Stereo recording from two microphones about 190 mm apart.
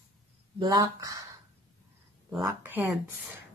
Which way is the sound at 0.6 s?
20° right (ahead or behind).